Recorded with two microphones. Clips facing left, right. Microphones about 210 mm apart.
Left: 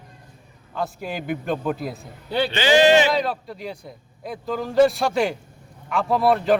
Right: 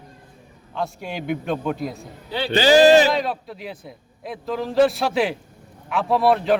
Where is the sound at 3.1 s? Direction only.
Centre (ahead or behind).